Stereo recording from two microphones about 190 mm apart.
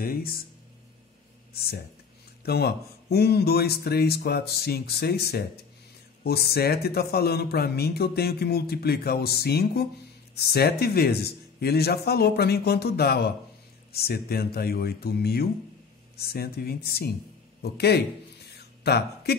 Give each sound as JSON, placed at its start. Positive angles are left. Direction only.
{"t": 0.0, "sound": "speech", "side_deg": 50}
{"t": 1.5, "sound": "speech", "side_deg": 55}